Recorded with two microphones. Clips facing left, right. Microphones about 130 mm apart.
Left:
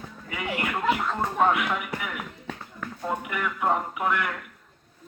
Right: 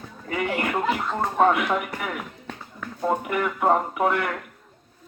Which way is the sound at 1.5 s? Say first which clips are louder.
Right 3 dB; 45° right (ahead or behind).